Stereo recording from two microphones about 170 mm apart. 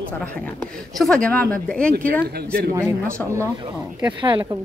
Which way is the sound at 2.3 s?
65° right (ahead or behind).